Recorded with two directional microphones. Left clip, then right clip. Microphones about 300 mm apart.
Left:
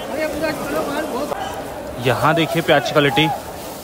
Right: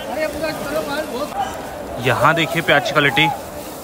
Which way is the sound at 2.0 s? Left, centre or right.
Centre.